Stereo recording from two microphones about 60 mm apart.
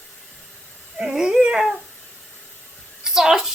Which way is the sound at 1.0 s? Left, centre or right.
Centre.